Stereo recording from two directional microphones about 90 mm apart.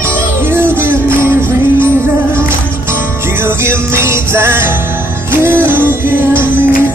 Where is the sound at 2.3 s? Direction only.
25° right (ahead or behind).